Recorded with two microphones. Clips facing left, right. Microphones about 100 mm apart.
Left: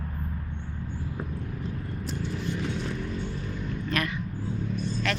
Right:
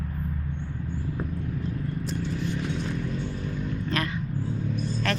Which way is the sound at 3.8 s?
30° right (ahead or behind).